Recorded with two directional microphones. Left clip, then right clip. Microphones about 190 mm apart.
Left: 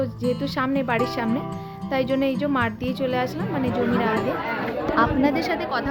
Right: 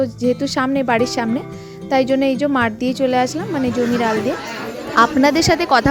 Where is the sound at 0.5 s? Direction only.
30° right (ahead or behind).